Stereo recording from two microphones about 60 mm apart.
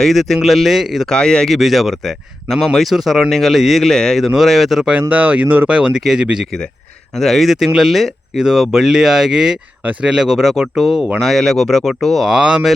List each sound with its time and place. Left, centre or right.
0.0 s speech: centre
1.0 s speech: centre
1.5 s speech: centre
4.2 s speech: centre
4.9 s speech: right
6.0 s speech: centre
7.2 s speech: centre
12.2 s speech: centre